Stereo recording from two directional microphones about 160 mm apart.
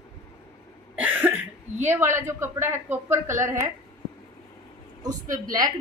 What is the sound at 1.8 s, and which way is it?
A woman's voice, 15° right (ahead or behind).